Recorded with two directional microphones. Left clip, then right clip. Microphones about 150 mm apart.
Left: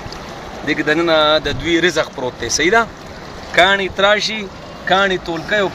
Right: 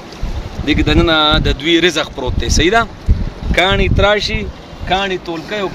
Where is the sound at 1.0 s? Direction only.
55° right (ahead or behind).